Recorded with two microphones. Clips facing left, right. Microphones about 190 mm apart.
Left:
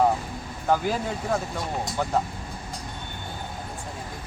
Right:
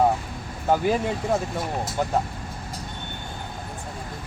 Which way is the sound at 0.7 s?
20° right (ahead or behind).